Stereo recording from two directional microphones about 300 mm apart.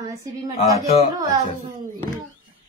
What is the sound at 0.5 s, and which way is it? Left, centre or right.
Speech, left.